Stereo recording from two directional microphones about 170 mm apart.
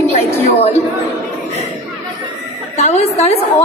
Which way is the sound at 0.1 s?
40° left (ahead or behind).